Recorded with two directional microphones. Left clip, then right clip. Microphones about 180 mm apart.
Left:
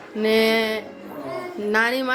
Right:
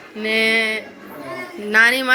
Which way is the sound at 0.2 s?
35° left (ahead or behind).